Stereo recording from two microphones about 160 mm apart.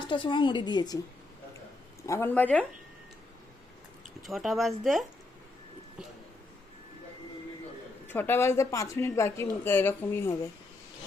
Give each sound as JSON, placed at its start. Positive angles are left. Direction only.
{"t": 0.0, "sound": "a woman's voice", "side_deg": 30}
{"t": 2.0, "sound": "speech", "side_deg": 15}
{"t": 4.2, "sound": "speech", "side_deg": 0}
{"t": 8.0, "sound": "speech", "side_deg": 15}